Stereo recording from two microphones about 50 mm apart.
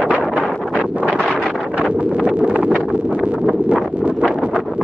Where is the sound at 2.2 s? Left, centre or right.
Right.